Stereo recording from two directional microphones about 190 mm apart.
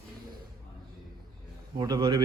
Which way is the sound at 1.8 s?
20° right (ahead or behind).